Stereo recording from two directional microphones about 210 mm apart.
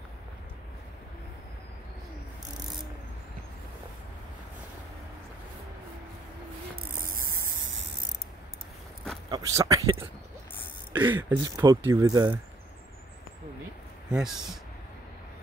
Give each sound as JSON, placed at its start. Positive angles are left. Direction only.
{"t": 9.3, "sound": "speech", "side_deg": -15}
{"t": 11.0, "sound": "speech", "side_deg": -10}
{"t": 14.0, "sound": "speech", "side_deg": -5}